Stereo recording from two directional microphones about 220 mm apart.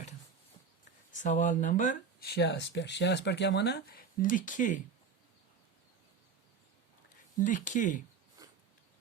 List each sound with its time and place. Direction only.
1.1 s speech: 35° left (ahead or behind)
7.3 s speech: 35° left (ahead or behind)
8.4 s a sound: 15° right (ahead or behind)